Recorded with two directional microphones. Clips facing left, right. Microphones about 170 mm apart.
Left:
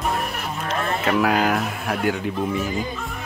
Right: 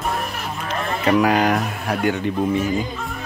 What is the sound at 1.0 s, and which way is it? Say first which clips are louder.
Speech: right 4 dB; centre (ahead or behind).